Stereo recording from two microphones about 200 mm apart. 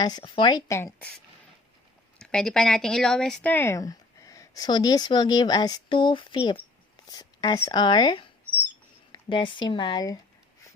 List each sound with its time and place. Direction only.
0.0 s speech: 20° left (ahead or behind)